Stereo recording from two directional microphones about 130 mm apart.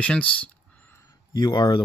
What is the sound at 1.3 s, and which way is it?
Speech, 35° left (ahead or behind).